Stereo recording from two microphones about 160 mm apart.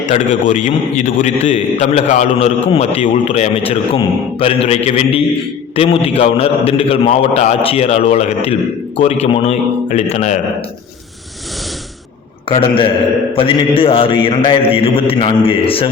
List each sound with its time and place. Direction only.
0.1 s a man's voice: 50° left (ahead or behind)
12.5 s a man's voice: 35° left (ahead or behind)